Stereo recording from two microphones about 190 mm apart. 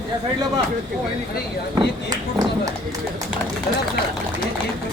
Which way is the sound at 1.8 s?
20° right (ahead or behind).